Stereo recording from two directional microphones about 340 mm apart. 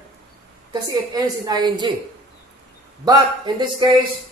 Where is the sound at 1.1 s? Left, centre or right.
Centre.